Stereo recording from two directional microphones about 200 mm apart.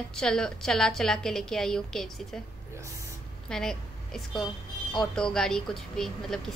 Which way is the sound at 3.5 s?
5° left (ahead or behind).